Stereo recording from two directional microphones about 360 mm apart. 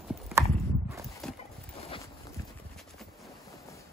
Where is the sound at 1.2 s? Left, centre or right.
Centre.